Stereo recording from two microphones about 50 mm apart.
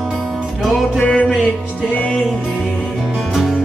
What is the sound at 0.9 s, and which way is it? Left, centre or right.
Music, left.